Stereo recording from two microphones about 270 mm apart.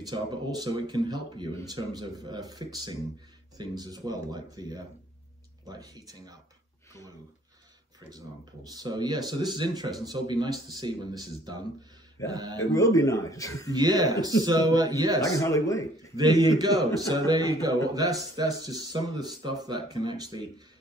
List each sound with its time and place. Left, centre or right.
0.0 s speech: centre
8.7 s speech: centre
12.7 s speech: centre
13.7 s speech: centre
15.2 s speech: centre
16.2 s speech: centre